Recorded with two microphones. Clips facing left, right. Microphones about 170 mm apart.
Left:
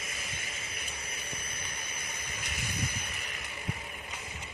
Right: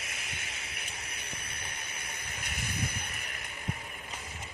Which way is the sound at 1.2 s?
65° right (ahead or behind).